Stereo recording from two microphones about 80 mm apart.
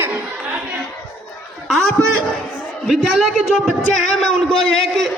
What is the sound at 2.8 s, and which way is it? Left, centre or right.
Speech, centre.